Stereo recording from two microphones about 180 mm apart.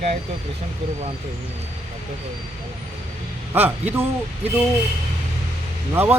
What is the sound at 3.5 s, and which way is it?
Speech, 10° right (ahead or behind).